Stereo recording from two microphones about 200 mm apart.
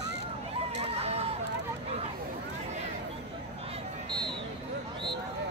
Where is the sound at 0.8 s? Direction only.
30° right (ahead or behind).